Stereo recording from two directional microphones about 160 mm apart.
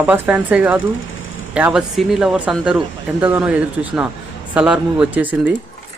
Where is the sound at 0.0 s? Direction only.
10° right (ahead or behind).